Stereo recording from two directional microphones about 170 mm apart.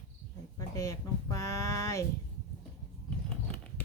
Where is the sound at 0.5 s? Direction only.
20° left (ahead or behind).